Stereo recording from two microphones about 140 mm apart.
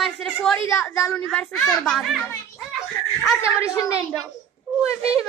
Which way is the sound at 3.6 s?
25° left (ahead or behind).